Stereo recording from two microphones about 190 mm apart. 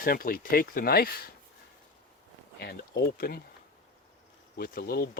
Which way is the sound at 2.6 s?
55° left (ahead or behind).